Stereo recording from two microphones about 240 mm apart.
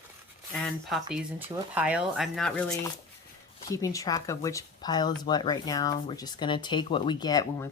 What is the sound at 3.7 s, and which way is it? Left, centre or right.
Speech, centre.